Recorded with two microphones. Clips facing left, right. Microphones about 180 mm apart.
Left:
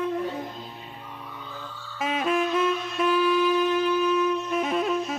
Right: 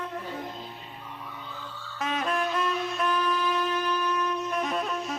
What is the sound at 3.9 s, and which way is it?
Wind instrument, 10° left (ahead or behind).